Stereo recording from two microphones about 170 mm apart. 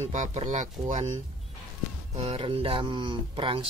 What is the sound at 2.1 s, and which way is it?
Speech, 35° right (ahead or behind).